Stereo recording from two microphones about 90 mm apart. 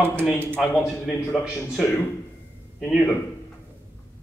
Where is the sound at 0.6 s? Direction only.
5° right (ahead or behind).